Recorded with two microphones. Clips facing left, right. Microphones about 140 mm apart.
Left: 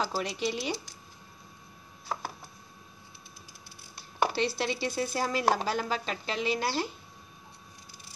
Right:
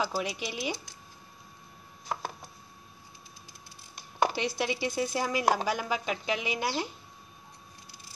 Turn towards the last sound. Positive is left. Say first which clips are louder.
# left 2 dB
turn(degrees=-15)  # may be behind; listen again after turning